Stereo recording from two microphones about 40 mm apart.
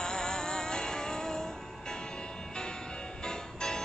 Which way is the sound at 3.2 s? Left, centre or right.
Centre.